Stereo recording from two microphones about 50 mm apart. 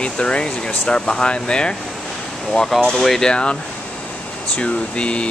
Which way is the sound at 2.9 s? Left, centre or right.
Centre.